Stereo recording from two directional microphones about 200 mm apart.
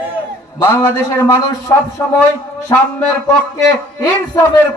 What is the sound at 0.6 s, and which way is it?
A man's voice, 10° left (ahead or behind).